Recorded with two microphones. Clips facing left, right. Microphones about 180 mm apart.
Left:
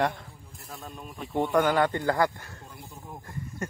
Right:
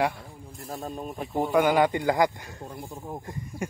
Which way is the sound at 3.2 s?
15° right (ahead or behind).